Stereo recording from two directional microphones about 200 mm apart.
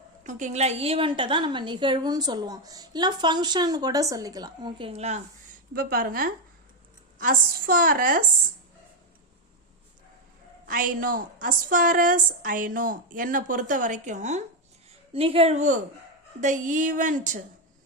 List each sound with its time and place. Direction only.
0.3 s a woman's voice: 40° right (ahead or behind)
5.7 s a woman's voice: 45° right (ahead or behind)
10.7 s a woman's voice: 45° right (ahead or behind)